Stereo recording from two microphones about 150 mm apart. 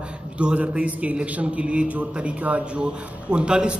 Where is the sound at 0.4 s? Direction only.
10° right (ahead or behind).